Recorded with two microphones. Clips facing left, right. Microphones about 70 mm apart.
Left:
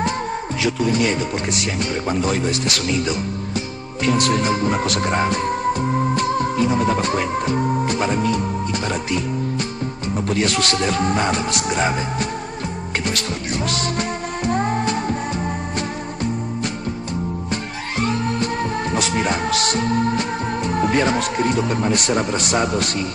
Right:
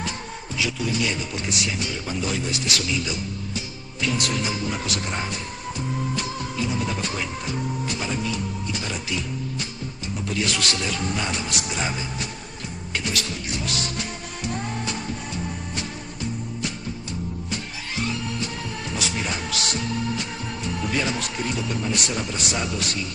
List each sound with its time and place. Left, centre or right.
0.6 s speech: left
13.0 s music: left
17.5 s music: left